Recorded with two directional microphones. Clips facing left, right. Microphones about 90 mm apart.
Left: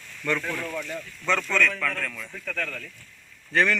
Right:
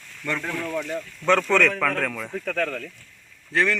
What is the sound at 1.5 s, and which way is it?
Speech, 70° right (ahead or behind).